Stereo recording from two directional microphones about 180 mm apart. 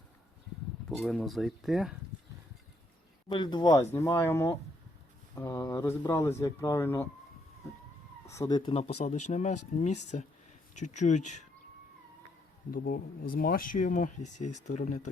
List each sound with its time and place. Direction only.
0.9 s speech: centre (ahead or behind)
3.2 s speech: 25° left (ahead or behind)
8.3 s speech: 20° left (ahead or behind); by 11.4 s 40° left (ahead or behind)
12.7 s speech: 50° left (ahead or behind)